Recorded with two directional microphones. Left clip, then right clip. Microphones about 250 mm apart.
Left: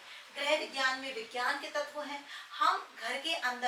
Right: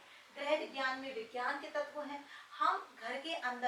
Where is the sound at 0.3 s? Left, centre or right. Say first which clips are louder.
Left 4 dB; centre.